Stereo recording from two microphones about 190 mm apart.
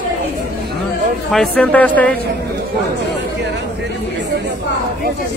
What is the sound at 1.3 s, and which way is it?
Speech, 5° left (ahead or behind).